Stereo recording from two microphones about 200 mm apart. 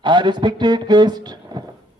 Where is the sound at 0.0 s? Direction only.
25° right (ahead or behind).